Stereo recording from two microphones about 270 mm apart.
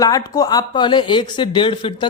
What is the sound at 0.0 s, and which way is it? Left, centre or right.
Speech, centre.